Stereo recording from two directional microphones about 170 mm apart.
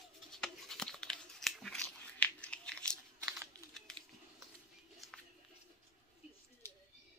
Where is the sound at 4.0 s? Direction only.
25° right (ahead or behind).